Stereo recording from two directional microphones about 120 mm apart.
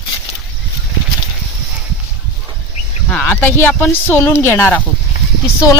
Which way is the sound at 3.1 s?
15° left (ahead or behind).